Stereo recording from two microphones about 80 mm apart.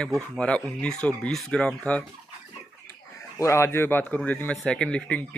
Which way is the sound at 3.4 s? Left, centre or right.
Left.